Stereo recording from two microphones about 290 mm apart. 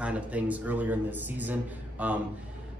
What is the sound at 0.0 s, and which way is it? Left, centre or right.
A man's voice, centre.